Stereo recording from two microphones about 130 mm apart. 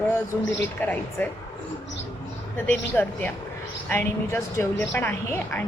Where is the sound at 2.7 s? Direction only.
15° left (ahead or behind).